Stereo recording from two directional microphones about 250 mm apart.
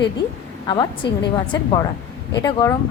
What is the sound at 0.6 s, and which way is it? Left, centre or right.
Speech, centre.